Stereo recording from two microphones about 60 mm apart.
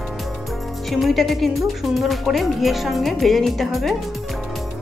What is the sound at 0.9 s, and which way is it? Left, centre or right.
Speech, centre.